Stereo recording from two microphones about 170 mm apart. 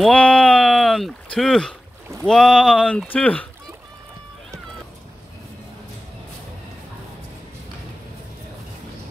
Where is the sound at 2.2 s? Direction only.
5° left (ahead or behind).